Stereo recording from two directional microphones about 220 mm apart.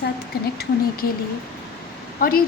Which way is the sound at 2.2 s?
40° left (ahead or behind).